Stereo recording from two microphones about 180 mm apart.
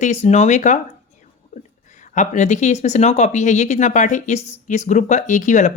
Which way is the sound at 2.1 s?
40° left (ahead or behind).